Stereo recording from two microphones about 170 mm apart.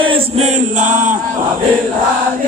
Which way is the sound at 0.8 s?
50° right (ahead or behind).